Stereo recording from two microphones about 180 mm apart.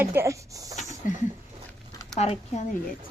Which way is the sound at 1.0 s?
50° left (ahead or behind).